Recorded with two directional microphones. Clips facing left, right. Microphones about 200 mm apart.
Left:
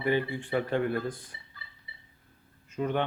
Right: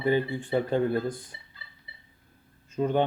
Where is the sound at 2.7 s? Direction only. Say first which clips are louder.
Right 4 dB; 35° right (ahead or behind).